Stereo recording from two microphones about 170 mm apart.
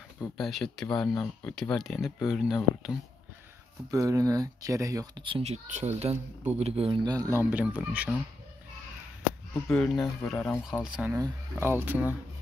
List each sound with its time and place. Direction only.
0.4 s speech: centre (ahead or behind)
3.9 s speech: 20° right (ahead or behind)
9.7 s speech: 10° left (ahead or behind)
10.6 s speech: 5° right (ahead or behind)
11.1 s speech: 15° right (ahead or behind)